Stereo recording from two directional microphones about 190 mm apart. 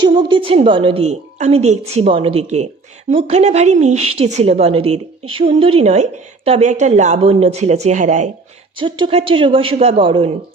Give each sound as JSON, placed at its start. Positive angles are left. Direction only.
{"t": 0.0, "sound": "a woman's voice", "side_deg": -25}
{"t": 8.8, "sound": "a woman's voice", "side_deg": -25}